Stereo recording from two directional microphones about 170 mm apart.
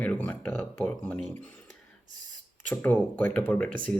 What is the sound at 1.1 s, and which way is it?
Speech, 45° right (ahead or behind).